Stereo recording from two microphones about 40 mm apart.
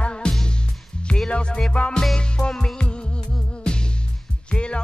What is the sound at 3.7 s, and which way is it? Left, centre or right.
Music, left.